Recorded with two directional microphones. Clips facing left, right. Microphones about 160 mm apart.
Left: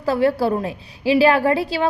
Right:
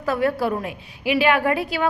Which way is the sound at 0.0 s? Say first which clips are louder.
Left 3 dB; 30° left (ahead or behind).